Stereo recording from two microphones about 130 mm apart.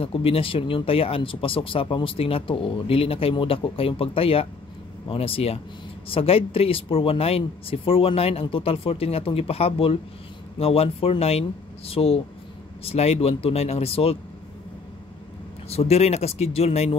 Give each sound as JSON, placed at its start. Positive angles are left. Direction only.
{"t": 0.0, "sound": "speech", "side_deg": 45}
{"t": 15.7, "sound": "speech", "side_deg": 55}